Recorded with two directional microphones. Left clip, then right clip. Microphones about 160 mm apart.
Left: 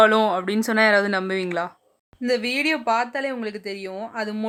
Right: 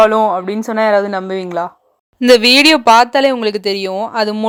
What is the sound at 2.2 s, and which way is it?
Speech, 55° right (ahead or behind).